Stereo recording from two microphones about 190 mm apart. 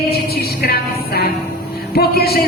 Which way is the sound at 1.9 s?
55° left (ahead or behind).